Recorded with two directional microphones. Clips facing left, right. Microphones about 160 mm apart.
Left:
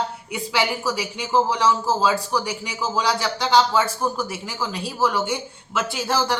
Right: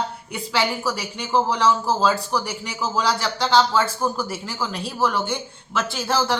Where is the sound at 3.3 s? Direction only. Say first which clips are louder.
Even; 15° left (ahead or behind).